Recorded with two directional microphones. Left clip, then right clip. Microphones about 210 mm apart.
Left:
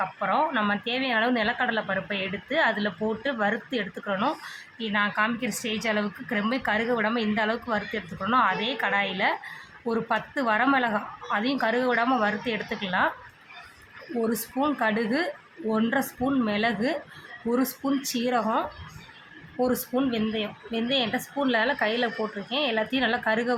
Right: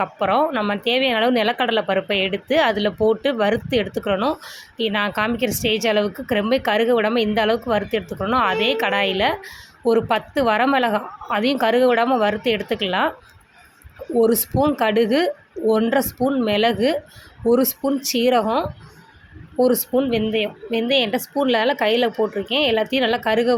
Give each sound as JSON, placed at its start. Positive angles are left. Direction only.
{"t": 0.0, "sound": "a woman's voice", "side_deg": -30}
{"t": 14.2, "sound": "speech", "side_deg": -30}